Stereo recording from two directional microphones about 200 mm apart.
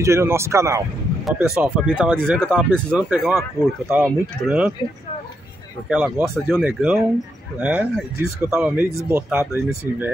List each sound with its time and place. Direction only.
0.0 s speech: 15° right (ahead or behind)
1.2 s speech: centre (ahead or behind)
3.6 s speech: 15° left (ahead or behind)
3.9 s speech: 10° right (ahead or behind)
5.9 s speech: 5° right (ahead or behind)